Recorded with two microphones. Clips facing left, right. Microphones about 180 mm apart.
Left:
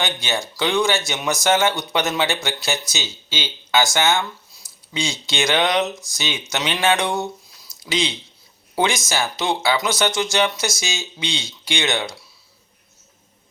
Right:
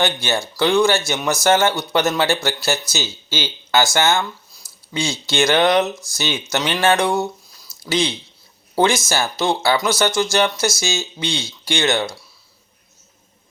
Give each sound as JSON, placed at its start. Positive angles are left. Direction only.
{"t": 0.0, "sound": "speech", "side_deg": 15}
{"t": 7.6, "sound": "a sound", "side_deg": 15}
{"t": 8.8, "sound": "speech", "side_deg": 15}